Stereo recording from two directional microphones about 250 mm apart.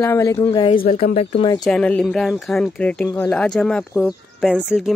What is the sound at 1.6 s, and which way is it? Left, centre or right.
Speech, centre.